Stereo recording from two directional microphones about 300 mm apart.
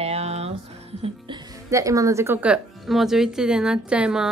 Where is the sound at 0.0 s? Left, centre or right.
Right.